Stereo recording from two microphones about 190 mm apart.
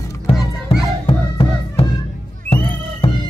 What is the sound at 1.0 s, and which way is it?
Music, 30° left (ahead or behind).